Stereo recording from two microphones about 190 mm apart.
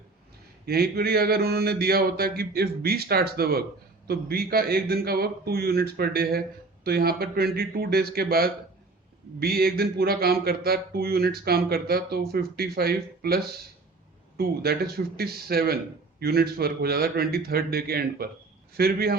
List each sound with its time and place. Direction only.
0.6 s a man's voice: 55° right (ahead or behind)